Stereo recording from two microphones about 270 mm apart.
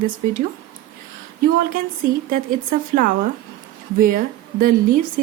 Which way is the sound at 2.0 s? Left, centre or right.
Right.